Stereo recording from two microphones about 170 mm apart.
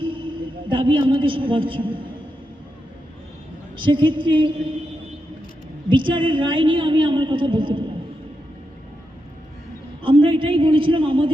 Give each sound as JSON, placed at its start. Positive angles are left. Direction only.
{"t": 0.0, "sound": "a woman's voice", "side_deg": -30}
{"t": 3.8, "sound": "a woman's voice", "side_deg": -30}
{"t": 5.9, "sound": "a woman's voice", "side_deg": -30}
{"t": 10.0, "sound": "a man's voice", "side_deg": -30}